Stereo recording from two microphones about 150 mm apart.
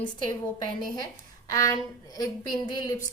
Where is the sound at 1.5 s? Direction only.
25° left (ahead or behind).